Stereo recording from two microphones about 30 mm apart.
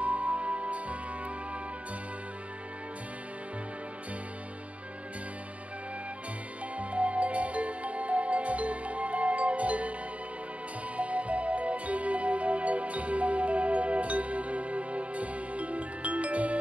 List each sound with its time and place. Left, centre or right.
0.0 s music: right
6.8 s music: right
11.0 s music: right